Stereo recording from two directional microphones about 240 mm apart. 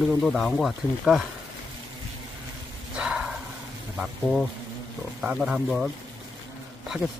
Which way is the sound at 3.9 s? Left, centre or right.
Centre.